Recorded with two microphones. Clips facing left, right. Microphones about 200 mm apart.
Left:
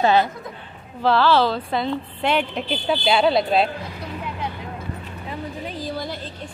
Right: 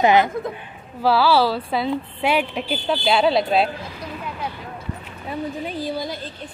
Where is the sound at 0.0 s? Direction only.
15° right (ahead or behind).